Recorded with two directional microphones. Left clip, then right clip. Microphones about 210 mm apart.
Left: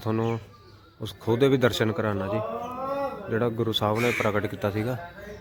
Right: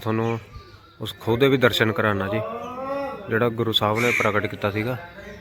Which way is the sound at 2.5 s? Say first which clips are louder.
Right 1 dB; 35° right (ahead or behind).